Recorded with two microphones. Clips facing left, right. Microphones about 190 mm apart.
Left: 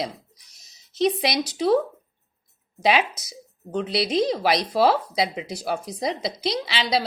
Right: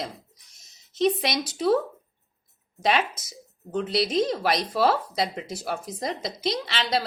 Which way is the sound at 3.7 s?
Centre (ahead or behind).